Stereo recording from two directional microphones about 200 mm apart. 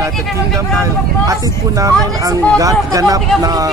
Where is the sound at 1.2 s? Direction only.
15° right (ahead or behind).